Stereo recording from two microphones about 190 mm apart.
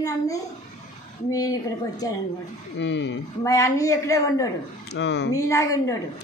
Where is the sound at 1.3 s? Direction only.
20° left (ahead or behind).